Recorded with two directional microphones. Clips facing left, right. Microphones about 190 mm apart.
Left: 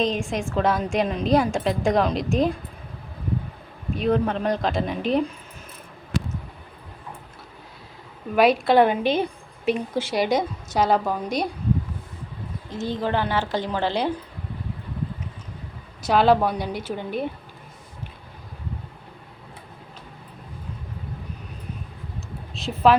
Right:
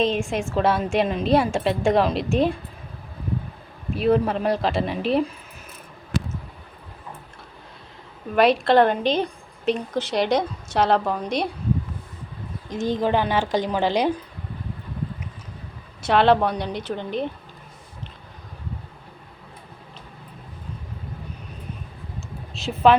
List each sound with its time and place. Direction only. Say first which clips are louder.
0.0 s a woman's voice: right 2 dB; centre (ahead or behind)
3.9 s a woman's voice: right 2 dB; 5° right (ahead or behind)
8.4 s a woman's voice: even; 5° left (ahead or behind)
12.6 s a woman's voice: right 4 dB; 15° right (ahead or behind)
16.0 s a woman's voice: even; centre (ahead or behind)
22.5 s speech: right 1 dB; centre (ahead or behind)